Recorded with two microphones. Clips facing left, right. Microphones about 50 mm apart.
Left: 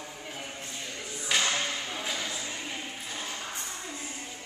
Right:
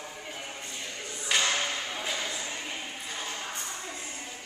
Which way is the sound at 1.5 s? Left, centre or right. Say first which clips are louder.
Right 1 dB; centre.